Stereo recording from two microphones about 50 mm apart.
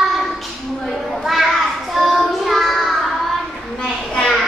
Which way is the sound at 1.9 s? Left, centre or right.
Centre.